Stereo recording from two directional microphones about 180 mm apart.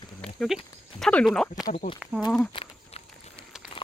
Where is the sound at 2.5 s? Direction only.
30° left (ahead or behind).